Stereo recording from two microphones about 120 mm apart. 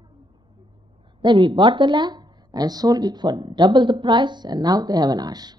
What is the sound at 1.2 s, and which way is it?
A woman's voice, 40° right (ahead or behind).